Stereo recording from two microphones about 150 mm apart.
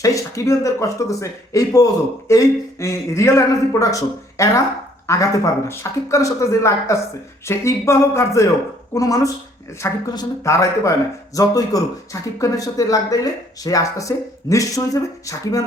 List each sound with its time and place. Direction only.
0.0 s speech: 20° left (ahead or behind)